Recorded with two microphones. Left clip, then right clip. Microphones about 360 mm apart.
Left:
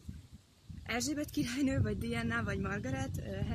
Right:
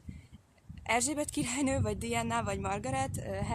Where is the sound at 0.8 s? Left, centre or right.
Centre.